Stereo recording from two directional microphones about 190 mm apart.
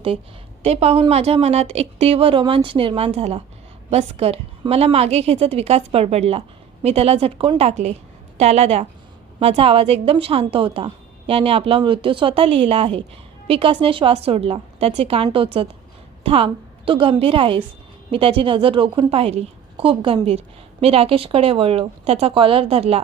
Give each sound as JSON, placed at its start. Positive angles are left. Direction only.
{"t": 0.6, "sound": "a woman's voice", "side_deg": -35}